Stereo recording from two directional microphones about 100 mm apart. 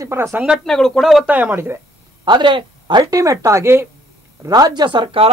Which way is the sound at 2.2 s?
50° right (ahead or behind).